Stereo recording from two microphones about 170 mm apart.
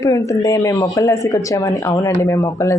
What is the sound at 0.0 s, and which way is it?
Speech, 20° left (ahead or behind).